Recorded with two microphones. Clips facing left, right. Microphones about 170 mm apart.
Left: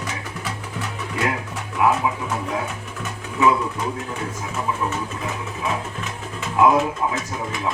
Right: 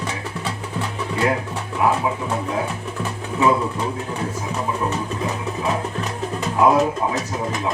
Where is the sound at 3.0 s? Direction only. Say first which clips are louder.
Even; 30° right (ahead or behind).